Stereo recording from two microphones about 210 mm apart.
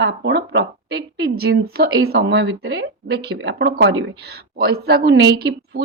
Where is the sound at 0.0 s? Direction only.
55° right (ahead or behind).